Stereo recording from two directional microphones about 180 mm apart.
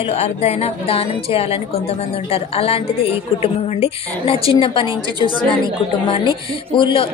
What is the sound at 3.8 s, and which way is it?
A woman's voice, 30° left (ahead or behind).